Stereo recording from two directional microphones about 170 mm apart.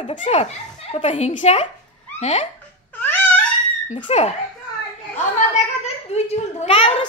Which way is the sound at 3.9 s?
40° left (ahead or behind).